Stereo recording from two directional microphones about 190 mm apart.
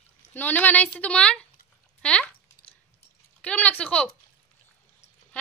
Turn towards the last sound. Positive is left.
turn(degrees=5)  # may be behind; listen again after turning